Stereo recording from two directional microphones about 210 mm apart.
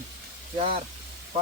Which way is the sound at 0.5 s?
25° right (ahead or behind).